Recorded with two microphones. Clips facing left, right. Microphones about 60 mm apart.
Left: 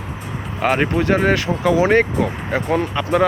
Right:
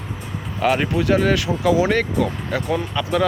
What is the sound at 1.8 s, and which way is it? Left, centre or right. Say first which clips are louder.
Speech: left 4 dB; left.